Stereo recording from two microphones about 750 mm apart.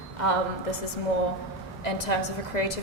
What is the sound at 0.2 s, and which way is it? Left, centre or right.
Speech, left.